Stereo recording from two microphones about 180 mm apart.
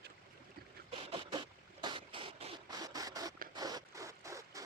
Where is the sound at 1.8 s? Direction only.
25° right (ahead or behind).